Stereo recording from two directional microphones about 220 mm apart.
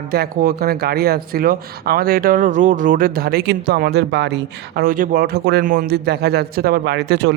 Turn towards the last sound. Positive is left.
turn(degrees=-50)  # may be behind; listen again after turning